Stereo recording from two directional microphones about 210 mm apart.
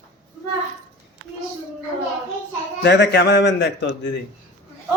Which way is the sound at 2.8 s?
55° left (ahead or behind).